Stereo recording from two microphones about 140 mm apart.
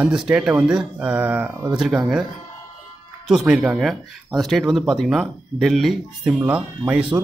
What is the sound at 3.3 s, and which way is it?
Speech, 5° right (ahead or behind).